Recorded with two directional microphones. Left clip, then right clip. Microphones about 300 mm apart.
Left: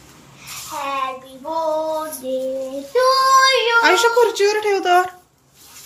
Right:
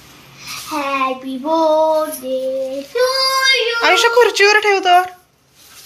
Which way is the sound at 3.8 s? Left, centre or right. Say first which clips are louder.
Right 6 dB; centre.